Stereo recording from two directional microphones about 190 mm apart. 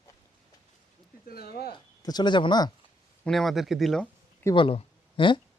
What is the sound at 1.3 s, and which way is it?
Speech, 55° left (ahead or behind).